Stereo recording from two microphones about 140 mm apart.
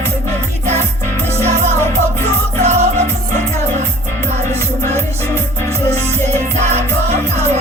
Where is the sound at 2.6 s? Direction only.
55° right (ahead or behind).